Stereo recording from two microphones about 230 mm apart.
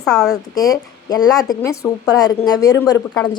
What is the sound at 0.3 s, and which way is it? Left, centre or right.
A woman's voice, centre.